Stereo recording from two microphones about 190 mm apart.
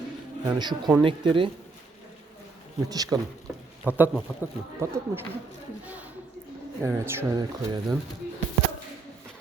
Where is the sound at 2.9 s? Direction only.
20° right (ahead or behind).